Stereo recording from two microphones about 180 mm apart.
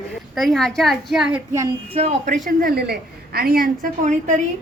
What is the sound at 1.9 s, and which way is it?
Speech, 35° right (ahead or behind).